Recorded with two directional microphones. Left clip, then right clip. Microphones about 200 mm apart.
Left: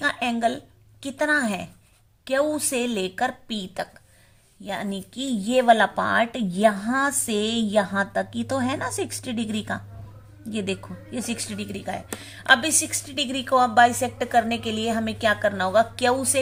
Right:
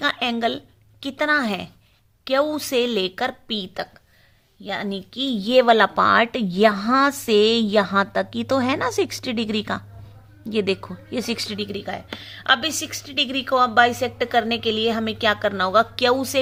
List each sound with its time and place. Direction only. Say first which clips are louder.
0.0 s a woman's voice: right 1 dB; 25° right (ahead or behind)